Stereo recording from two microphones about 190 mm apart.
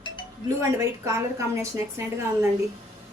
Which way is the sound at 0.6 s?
15° right (ahead or behind).